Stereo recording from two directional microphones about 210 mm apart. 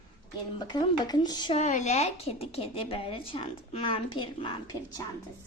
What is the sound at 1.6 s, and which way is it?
A woman's voice, 35° left (ahead or behind).